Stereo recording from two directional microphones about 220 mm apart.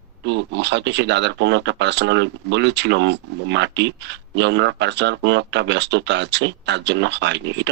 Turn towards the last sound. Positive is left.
turn(degrees=-55)  # may be behind; listen again after turning